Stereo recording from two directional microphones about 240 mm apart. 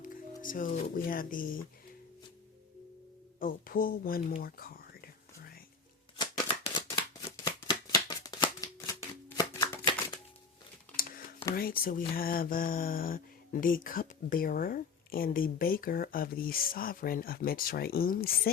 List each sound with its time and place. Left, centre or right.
0.4 s speech: left
3.4 s whispering: left
6.1 s shuffling cards: left
11.5 s speech: left